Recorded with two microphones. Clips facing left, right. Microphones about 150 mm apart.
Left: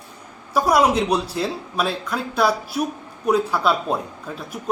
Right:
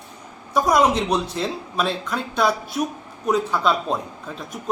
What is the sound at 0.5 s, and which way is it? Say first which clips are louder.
Speech: left 1 dB; 5° left (ahead or behind).